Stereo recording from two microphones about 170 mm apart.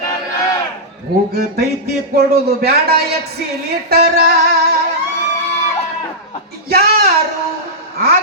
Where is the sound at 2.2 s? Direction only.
65° right (ahead or behind).